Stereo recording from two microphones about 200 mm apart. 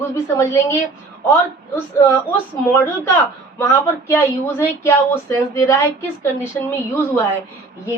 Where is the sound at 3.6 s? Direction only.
15° left (ahead or behind).